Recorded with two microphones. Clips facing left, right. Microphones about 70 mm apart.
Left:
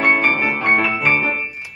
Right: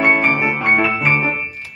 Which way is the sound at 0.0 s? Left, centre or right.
Centre.